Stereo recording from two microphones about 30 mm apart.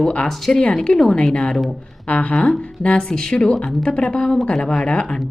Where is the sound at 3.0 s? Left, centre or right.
Left.